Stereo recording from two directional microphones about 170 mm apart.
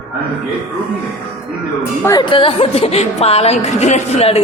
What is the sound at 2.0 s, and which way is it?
A woman's voice, 25° left (ahead or behind).